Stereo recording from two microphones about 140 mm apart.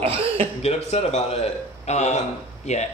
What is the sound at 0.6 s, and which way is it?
Speech, 50° left (ahead or behind).